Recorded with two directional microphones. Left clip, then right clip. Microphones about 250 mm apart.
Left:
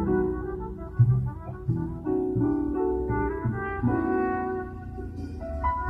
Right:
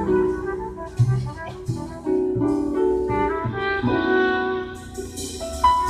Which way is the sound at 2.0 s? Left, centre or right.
Centre.